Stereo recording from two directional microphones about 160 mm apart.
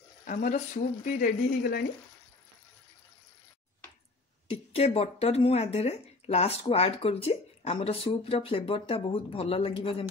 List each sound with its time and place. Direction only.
0.3 s speech: 50° left (ahead or behind); by 1.9 s 70° left (ahead or behind)
4.5 s speech: 40° left (ahead or behind)